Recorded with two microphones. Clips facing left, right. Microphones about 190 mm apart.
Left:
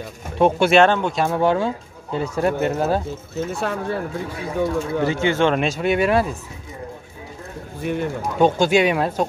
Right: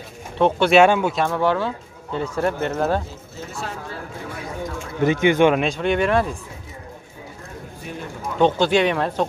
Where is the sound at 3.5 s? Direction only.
65° left (ahead or behind).